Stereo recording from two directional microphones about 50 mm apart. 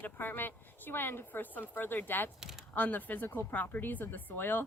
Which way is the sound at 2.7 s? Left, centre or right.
Left.